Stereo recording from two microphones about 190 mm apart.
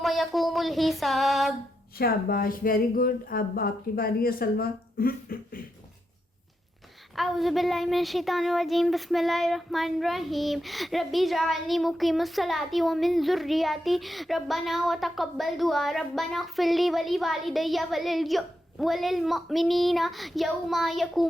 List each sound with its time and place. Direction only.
0.0 s child singing: centre (ahead or behind)
2.0 s speech: 55° left (ahead or behind)
7.2 s a woman's voice: centre (ahead or behind)